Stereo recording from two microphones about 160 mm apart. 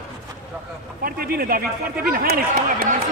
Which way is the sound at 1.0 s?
65° right (ahead or behind).